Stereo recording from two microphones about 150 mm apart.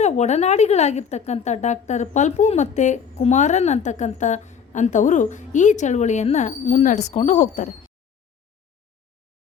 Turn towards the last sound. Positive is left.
turn(degrees=55)  # may be behind; listen again after turning